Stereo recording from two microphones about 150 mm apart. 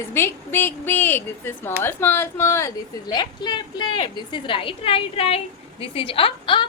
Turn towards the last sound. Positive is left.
turn(degrees=35)  # may be behind; listen again after turning